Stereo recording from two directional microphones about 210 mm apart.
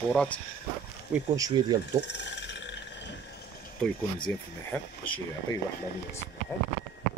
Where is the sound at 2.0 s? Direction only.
55° left (ahead or behind).